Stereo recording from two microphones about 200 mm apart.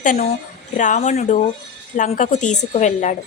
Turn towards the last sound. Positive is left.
turn(degrees=35)  # may be behind; listen again after turning